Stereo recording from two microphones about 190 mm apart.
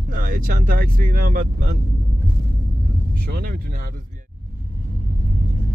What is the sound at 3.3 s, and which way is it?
Speech, 50° right (ahead or behind).